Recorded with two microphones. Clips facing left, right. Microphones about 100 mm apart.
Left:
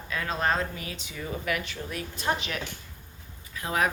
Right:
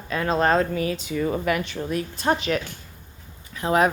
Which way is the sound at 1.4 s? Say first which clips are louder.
Right 7 dB; 35° right (ahead or behind).